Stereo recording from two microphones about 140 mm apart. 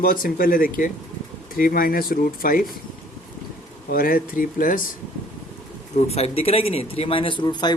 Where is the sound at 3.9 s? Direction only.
90° left.